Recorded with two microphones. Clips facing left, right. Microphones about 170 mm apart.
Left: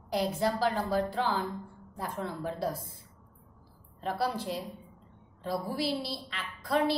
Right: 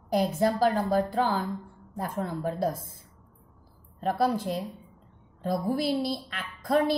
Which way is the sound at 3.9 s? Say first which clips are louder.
Right 6 dB; 45° right (ahead or behind).